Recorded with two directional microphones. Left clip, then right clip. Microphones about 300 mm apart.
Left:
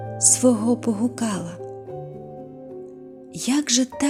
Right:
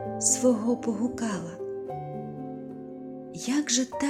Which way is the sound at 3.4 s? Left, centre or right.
Centre.